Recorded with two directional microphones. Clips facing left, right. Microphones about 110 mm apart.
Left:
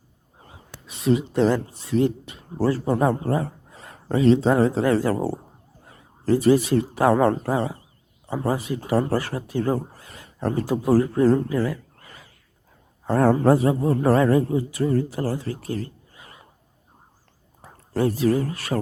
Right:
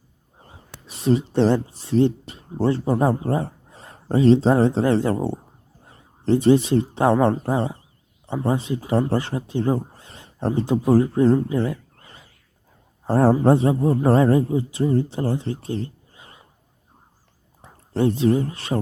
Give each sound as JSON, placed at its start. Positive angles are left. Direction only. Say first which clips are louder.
{"t": 0.4, "sound": "speech", "louder": "even", "side_deg": -35}
{"t": 5.1, "sound": "speech", "louder": "even", "side_deg": 5}
{"t": 5.9, "sound": "speech", "louder": "right 1 dB", "side_deg": -30}
{"t": 11.4, "sound": "a sound", "louder": "right 1 dB", "side_deg": -25}
{"t": 13.1, "sound": "speech", "louder": "right 1 dB", "side_deg": -30}
{"t": 17.6, "sound": "speech", "louder": "right 2 dB", "side_deg": -25}